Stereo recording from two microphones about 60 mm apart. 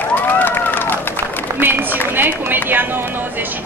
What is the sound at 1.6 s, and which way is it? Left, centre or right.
Speech, right.